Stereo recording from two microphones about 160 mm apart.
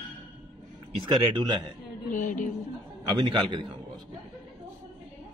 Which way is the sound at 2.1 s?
50° left (ahead or behind).